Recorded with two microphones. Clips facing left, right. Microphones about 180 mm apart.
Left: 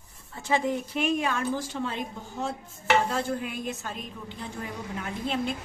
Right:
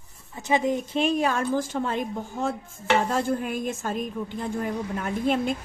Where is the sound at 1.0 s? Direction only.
35° right (ahead or behind).